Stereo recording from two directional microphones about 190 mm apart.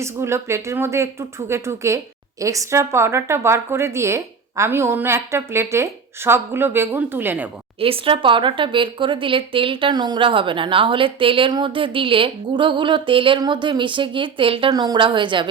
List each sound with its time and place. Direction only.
0.0 s a woman's voice: 15° right (ahead or behind)
7.8 s speech: 30° right (ahead or behind)